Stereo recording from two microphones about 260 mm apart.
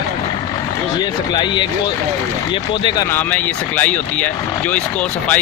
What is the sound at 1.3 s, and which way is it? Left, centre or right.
Speech, centre.